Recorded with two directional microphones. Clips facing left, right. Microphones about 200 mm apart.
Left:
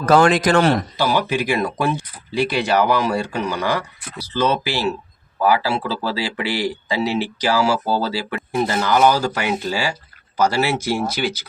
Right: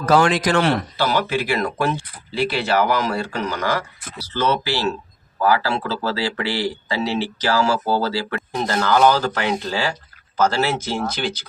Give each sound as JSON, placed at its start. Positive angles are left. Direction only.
{"t": 0.0, "sound": "a man's voice", "side_deg": 50}
{"t": 0.9, "sound": "speech", "side_deg": 15}